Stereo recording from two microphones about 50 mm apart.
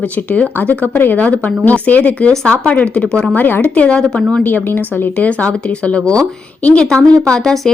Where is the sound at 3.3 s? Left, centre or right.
Left.